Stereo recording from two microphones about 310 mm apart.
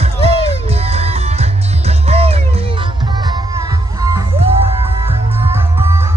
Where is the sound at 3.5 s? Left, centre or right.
Centre.